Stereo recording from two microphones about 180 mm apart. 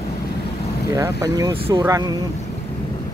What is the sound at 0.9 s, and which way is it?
Speech, 20° right (ahead or behind).